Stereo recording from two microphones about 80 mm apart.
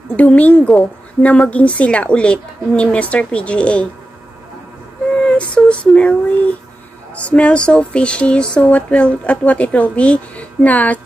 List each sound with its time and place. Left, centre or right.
0.1 s a woman's voice: centre
5.2 s female singing: centre
7.2 s speech: centre